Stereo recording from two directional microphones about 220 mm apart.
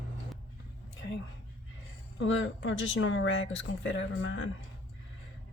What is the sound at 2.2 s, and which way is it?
Speech, 60° left (ahead or behind).